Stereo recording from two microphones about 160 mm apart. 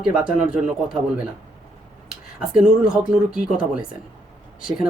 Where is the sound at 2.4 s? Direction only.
5° right (ahead or behind).